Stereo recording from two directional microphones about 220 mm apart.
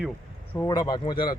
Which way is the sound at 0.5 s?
15° left (ahead or behind).